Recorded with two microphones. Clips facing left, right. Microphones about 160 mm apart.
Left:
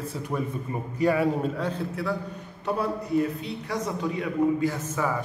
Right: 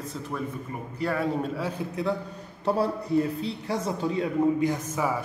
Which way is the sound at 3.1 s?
30° right (ahead or behind).